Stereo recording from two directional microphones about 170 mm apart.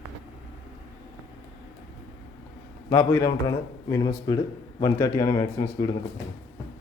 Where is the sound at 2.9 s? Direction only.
15° left (ahead or behind).